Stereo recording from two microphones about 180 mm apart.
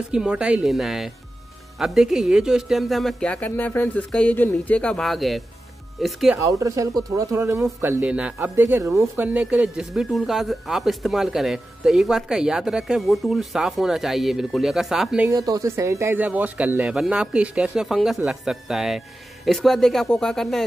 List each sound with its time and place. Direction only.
0.1 s speech: 5° right (ahead or behind)
6.3 s speech: 20° right (ahead or behind); by 15.2 s centre (ahead or behind)
15.2 s speech: 20° right (ahead or behind); by 20.6 s centre (ahead or behind)